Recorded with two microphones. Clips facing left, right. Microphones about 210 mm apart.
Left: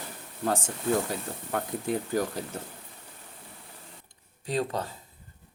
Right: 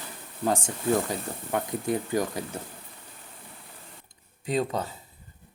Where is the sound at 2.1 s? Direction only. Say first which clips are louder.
Right 1 dB; 15° right (ahead or behind).